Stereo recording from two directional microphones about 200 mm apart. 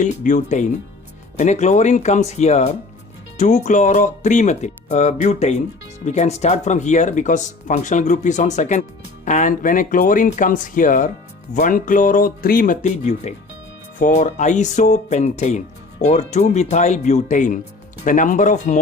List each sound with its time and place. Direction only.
0.0 s speech: 40° left (ahead or behind)